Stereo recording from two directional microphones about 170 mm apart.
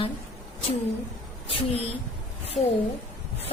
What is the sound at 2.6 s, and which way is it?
Speech, centre (ahead or behind).